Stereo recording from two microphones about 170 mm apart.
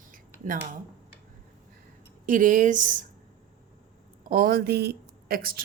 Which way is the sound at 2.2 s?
50° right (ahead or behind).